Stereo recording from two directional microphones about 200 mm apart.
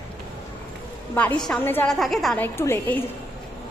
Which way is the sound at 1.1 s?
5° left (ahead or behind).